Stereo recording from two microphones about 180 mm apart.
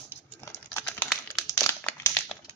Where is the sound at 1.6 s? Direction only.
15° left (ahead or behind).